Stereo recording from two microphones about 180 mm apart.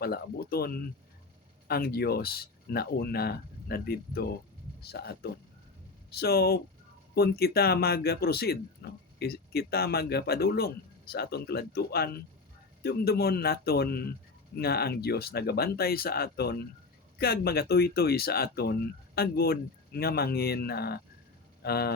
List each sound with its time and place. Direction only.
0.0 s speech: 60° left (ahead or behind)